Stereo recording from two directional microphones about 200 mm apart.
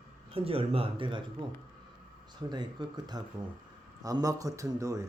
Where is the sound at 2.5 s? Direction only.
20° right (ahead or behind).